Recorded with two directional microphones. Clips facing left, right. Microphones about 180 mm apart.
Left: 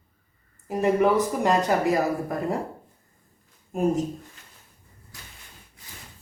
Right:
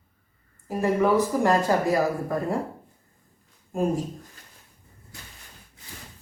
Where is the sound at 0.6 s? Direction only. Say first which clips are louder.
Left 1 dB; 20° left (ahead or behind).